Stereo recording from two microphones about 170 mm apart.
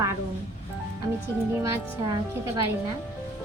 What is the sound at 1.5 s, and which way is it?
Speech, 20° right (ahead or behind).